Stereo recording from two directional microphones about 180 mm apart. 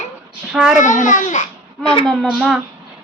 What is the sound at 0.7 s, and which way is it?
Speech, 45° left (ahead or behind).